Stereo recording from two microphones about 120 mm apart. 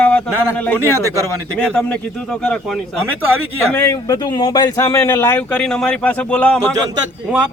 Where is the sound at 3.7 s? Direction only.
25° left (ahead or behind); by 6.6 s 10° left (ahead or behind).